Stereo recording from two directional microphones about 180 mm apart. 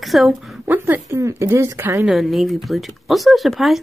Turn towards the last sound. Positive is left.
turn(degrees=0)  # may be behind; listen again after turning